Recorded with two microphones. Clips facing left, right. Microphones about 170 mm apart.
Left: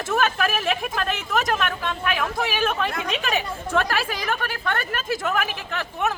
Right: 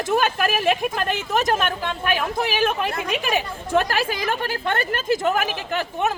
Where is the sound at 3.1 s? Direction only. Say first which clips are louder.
Right 2 dB; 10° right (ahead or behind).